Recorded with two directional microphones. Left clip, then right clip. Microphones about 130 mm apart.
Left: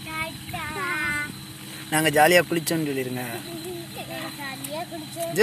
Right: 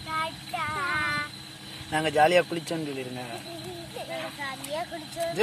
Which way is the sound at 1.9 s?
5° left (ahead or behind).